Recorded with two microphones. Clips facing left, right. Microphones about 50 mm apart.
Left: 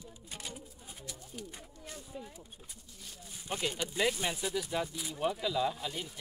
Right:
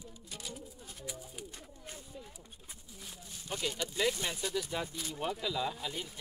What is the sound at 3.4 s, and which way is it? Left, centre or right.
A man's voice, left.